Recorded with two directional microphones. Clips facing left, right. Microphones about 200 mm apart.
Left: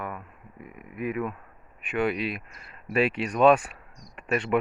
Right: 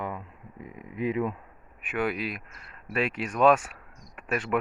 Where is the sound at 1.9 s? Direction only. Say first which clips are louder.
Left 3 dB; centre (ahead or behind).